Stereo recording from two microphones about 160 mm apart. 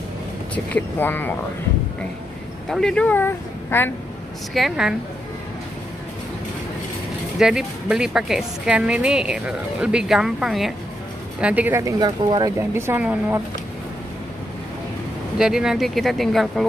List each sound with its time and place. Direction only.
0.7 s speech: 10° left (ahead or behind)
2.7 s speech: 5° left (ahead or behind)
4.6 s a woman's voice: 5° right (ahead or behind)
7.3 s a woman's voice: 5° right (ahead or behind)
12.0 s speech: 25° right (ahead or behind)
12.5 s a woman's voice: 15° right (ahead or behind)
15.3 s a woman's voice: 5° right (ahead or behind)